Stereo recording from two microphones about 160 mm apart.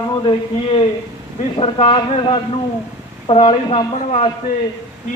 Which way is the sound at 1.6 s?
40° left (ahead or behind).